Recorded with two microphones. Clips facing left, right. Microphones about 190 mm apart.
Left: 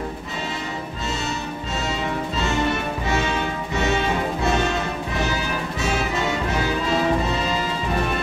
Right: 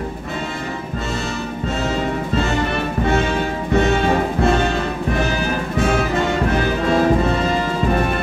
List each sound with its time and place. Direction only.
2.3 s music: 55° right (ahead or behind)